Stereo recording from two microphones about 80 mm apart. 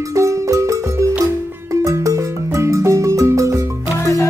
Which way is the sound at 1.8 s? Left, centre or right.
Right.